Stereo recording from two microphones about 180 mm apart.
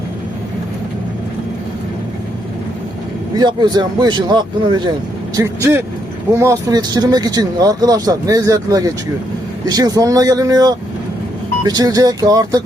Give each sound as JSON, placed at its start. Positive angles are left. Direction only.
{"t": 3.3, "sound": "speech", "side_deg": -25}